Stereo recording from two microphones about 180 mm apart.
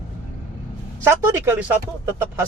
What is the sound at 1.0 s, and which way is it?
Speech, 15° right (ahead or behind).